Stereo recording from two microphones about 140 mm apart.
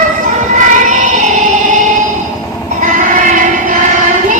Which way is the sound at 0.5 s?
60° right (ahead or behind).